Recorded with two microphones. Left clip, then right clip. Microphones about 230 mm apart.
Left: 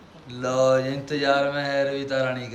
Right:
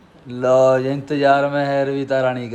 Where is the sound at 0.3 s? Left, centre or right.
Centre.